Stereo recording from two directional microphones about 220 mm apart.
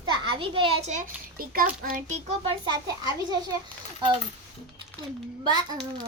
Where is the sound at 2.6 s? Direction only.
20° right (ahead or behind).